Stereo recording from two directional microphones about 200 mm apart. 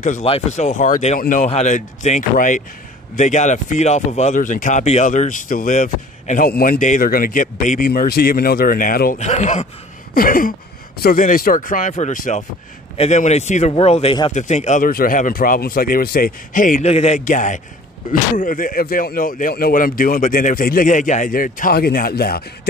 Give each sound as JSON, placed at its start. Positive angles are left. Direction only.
{"t": 0.0, "sound": "speech", "side_deg": 35}